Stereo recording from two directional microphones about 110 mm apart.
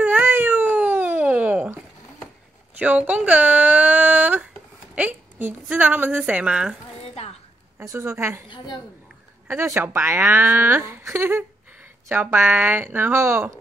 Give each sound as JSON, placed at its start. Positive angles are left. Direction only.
{"t": 0.0, "sound": "a sound", "side_deg": -15}
{"t": 2.8, "sound": "a woman's voice", "side_deg": -15}
{"t": 7.8, "sound": "speech", "side_deg": -25}
{"t": 8.5, "sound": "a woman's voice", "side_deg": 45}
{"t": 9.5, "sound": "speech", "side_deg": -20}